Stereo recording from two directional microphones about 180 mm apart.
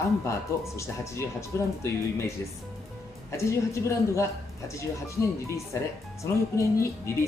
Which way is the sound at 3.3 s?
15° left (ahead or behind).